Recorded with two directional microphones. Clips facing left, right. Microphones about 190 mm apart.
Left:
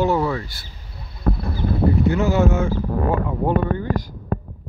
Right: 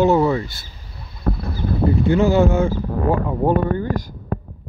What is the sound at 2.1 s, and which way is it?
Speech, 30° right (ahead or behind).